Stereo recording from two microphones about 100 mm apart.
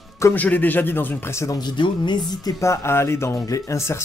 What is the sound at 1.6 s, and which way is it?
Speech, 45° left (ahead or behind).